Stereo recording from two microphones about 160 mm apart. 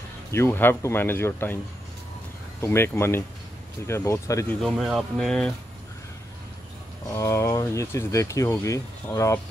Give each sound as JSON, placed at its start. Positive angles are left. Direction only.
{"t": 0.3, "sound": "speech", "side_deg": 15}
{"t": 2.6, "sound": "speech", "side_deg": 15}
{"t": 4.6, "sound": "speech", "side_deg": 0}
{"t": 7.2, "sound": "speech", "side_deg": 20}